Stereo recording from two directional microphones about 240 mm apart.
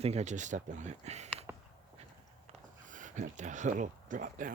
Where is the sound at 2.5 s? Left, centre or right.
Right.